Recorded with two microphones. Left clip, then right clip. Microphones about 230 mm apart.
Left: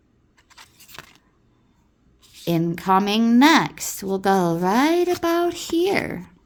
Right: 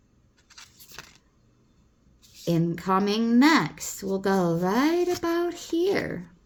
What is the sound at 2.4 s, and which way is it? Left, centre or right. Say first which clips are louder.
Speech: left 5 dB; left.